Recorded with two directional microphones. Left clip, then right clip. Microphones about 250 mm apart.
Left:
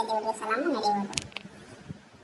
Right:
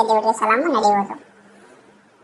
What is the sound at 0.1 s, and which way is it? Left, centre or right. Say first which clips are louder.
Speech: right 12 dB; right.